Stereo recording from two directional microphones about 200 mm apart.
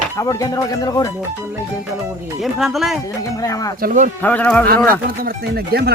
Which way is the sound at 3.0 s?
15° left (ahead or behind).